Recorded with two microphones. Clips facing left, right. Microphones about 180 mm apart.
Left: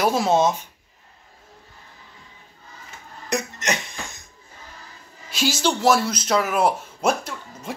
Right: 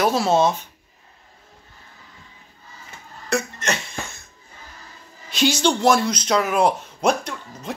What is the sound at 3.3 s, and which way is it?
Cough, 15° left (ahead or behind).